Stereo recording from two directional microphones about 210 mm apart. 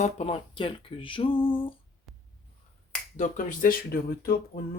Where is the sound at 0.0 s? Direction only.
30° left (ahead or behind).